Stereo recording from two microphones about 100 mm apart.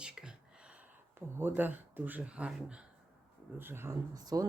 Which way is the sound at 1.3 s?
20° right (ahead or behind).